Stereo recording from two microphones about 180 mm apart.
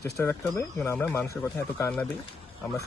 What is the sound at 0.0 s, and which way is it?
Speech, 15° left (ahead or behind).